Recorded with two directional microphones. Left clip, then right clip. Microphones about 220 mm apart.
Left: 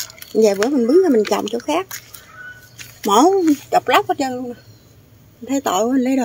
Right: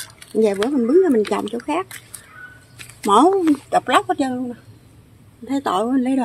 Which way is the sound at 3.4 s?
5° left (ahead or behind).